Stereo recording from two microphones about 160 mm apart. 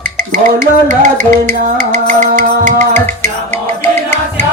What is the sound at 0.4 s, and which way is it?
Music, 55° right (ahead or behind).